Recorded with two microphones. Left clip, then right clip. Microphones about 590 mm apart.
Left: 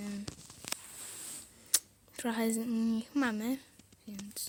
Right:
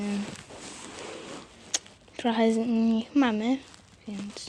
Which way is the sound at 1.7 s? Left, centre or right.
Left.